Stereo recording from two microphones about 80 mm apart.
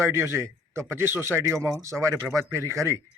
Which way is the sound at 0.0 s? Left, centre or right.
Right.